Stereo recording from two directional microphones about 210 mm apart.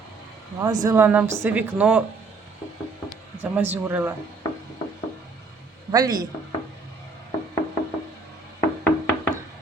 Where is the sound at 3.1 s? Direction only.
10° right (ahead or behind).